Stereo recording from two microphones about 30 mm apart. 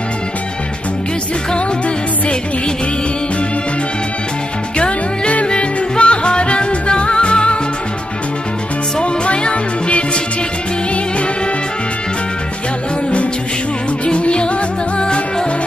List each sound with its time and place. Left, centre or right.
4.7 s music: left
9.0 s music: left
14.0 s music: left